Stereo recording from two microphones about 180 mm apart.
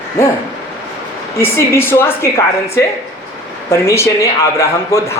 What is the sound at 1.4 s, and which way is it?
A man's voice, 15° left (ahead or behind).